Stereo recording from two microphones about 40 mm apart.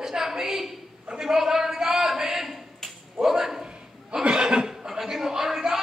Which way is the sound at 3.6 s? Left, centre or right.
Right.